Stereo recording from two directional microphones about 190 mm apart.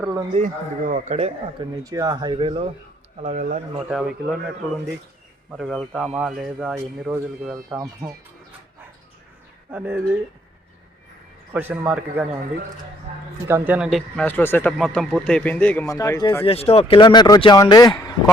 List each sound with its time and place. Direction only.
0.0 s speech: 15° right (ahead or behind)
0.3 s speech: 40° right (ahead or behind)
1.7 s speech: 20° right (ahead or behind)
3.2 s speech: 40° right (ahead or behind)
3.8 s a man's voice: 5° right (ahead or behind)
9.7 s speech: 10° right (ahead or behind)
11.5 s speech: 10° right (ahead or behind)
13.5 s a man's voice: 10° right (ahead or behind)
14.3 s speech: 10° left (ahead or behind)
16.0 s speech: 20° left (ahead or behind)
16.4 s speech: 30° left (ahead or behind)